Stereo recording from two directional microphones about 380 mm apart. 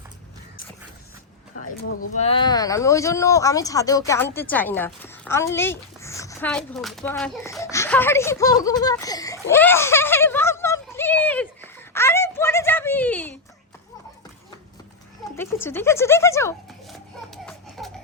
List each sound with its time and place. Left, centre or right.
1.6 s speech: left
2.2 s speech: centre
15.6 s speech: centre
17.3 s a sound: centre